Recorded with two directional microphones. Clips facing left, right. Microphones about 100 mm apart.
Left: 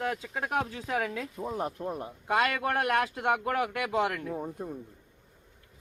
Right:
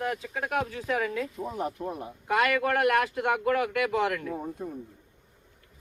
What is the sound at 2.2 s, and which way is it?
Speech, 25° left (ahead or behind).